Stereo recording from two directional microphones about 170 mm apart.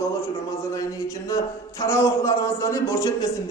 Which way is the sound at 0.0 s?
15° left (ahead or behind).